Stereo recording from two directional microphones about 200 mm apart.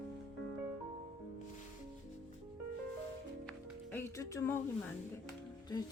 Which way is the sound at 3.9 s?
15° left (ahead or behind).